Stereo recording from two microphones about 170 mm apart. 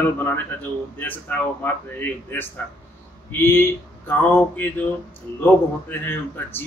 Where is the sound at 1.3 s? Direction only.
10° left (ahead or behind).